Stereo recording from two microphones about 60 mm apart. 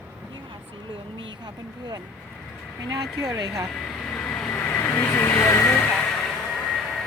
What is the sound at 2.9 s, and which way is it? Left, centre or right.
Speech, right.